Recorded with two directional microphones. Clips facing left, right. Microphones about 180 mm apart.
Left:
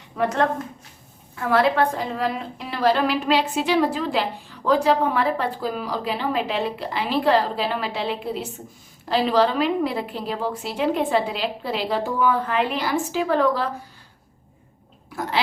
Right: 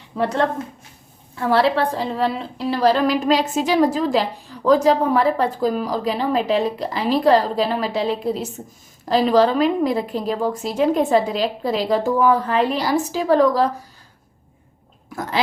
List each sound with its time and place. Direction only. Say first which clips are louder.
0.2 s a woman's voice: right 1 dB; 30° right (ahead or behind)